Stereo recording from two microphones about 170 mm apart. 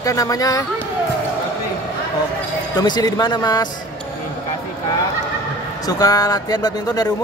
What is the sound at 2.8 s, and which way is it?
Speech, 25° left (ahead or behind).